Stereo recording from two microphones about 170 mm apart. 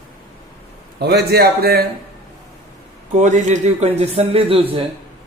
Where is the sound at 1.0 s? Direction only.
70° right (ahead or behind).